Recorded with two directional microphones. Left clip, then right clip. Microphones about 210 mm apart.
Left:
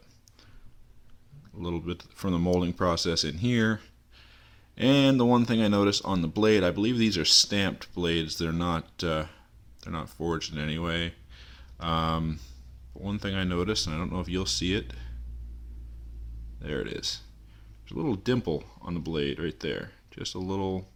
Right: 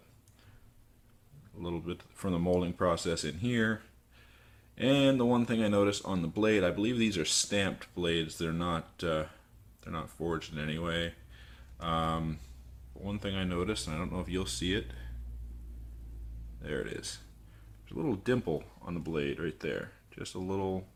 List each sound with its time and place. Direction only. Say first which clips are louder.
1.5 s speech: left 4 dB; 35° left (ahead or behind)
16.6 s speech: left 4 dB; 35° left (ahead or behind)